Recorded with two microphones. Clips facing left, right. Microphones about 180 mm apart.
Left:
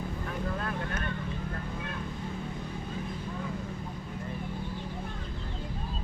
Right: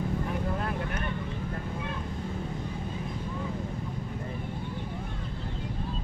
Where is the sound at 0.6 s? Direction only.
20° right (ahead or behind).